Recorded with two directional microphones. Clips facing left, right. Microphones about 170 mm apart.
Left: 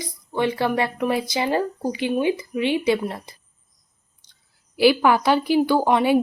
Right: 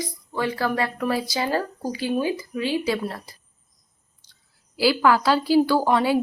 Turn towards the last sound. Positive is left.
turn(degrees=20)  # may be behind; listen again after turning